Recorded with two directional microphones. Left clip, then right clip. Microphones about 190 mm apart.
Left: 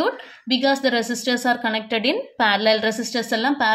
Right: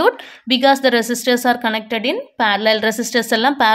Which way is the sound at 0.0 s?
35° right (ahead or behind).